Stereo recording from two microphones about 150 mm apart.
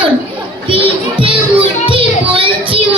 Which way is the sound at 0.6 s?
35° right (ahead or behind).